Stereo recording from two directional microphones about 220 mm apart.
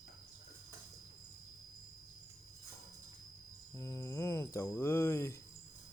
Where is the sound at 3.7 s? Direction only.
15° left (ahead or behind).